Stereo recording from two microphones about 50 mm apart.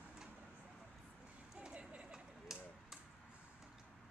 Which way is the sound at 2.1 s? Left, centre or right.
Centre.